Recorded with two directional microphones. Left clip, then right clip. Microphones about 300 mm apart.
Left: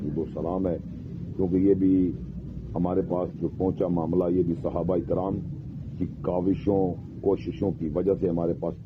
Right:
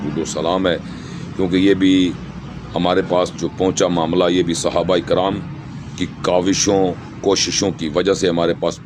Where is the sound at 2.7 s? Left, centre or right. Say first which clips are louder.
Right 11 dB; right.